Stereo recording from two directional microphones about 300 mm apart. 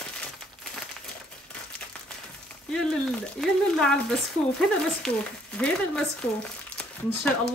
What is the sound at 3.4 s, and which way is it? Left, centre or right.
Speech, centre.